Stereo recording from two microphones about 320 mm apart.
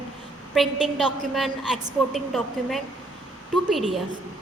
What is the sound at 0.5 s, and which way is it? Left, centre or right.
A woman's voice, centre.